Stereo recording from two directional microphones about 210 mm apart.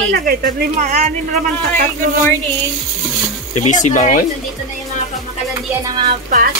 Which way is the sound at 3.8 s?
35° left (ahead or behind).